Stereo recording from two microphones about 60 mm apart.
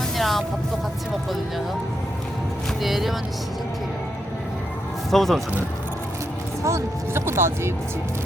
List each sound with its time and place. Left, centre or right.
0.2 s music: centre
2.8 s speech: centre
5.1 s speech: centre
6.6 s speech: right